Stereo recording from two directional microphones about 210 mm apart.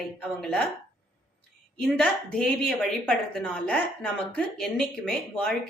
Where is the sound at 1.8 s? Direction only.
Centre (ahead or behind).